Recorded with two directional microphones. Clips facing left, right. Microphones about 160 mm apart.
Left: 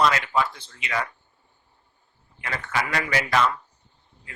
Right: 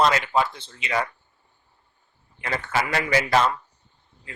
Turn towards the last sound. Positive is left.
turn(degrees=-30)  # may be behind; listen again after turning